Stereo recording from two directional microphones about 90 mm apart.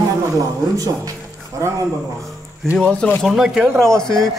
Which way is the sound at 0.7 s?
45° right (ahead or behind).